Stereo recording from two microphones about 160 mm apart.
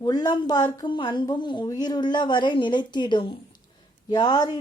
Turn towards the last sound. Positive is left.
turn(degrees=25)  # may be behind; listen again after turning